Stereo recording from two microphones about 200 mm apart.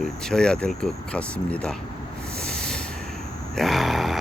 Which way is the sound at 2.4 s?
5° left (ahead or behind).